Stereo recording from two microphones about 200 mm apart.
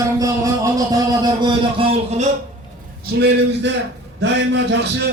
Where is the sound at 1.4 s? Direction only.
30° right (ahead or behind).